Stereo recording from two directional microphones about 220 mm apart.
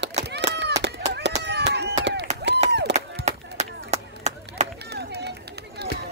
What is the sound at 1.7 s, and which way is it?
Chop, 50° right (ahead or behind).